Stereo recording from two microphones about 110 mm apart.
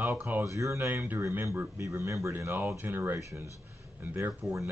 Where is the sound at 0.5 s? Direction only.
30° right (ahead or behind).